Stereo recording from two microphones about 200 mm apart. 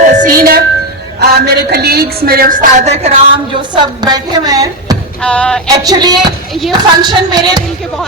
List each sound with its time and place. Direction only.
0.1 s music: 40° right (ahead or behind)
1.2 s a woman's voice: 55° right (ahead or behind); by 3.1 s 35° right (ahead or behind)
3.5 s a woman's voice: 20° right (ahead or behind)
5.2 s music: 5° left (ahead or behind)
5.6 s a woman's voice: 20° right (ahead or behind)
6.5 s music: centre (ahead or behind)
6.7 s a woman's voice: 20° right (ahead or behind)